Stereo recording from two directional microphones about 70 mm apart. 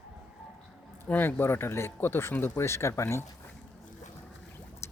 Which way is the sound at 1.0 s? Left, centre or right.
Left.